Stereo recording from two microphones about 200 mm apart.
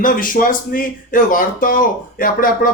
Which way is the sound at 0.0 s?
45° left (ahead or behind).